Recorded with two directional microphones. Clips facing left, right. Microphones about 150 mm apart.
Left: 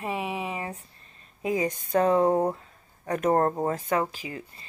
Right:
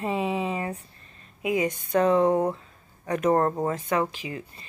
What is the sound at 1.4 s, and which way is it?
Speech, 35° left (ahead or behind).